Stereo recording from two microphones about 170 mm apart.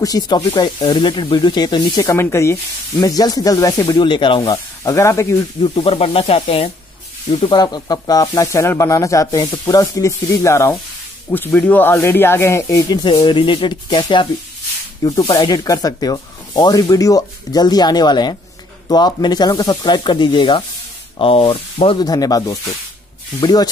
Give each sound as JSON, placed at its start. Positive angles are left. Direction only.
{"t": 0.0, "sound": "speech", "side_deg": 20}
{"t": 0.4, "sound": "speech", "side_deg": 30}
{"t": 5.6, "sound": "speech", "side_deg": 35}